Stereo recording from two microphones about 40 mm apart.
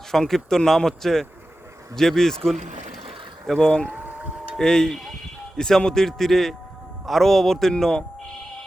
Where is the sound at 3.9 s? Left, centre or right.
Right.